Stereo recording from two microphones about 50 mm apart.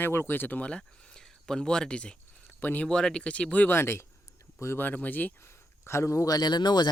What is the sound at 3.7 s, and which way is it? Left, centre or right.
Speech, left.